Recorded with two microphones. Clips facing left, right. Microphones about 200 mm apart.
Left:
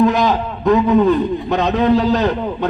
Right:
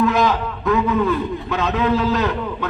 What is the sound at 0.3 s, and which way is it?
A man's voice, 35° left (ahead or behind).